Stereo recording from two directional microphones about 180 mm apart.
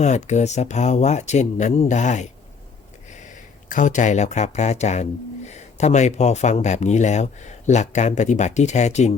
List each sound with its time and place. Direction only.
0.0 s speech: 40° left (ahead or behind)
3.7 s speech: 45° left (ahead or behind)